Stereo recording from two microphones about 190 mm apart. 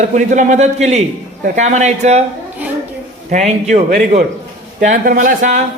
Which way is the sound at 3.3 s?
35° right (ahead or behind).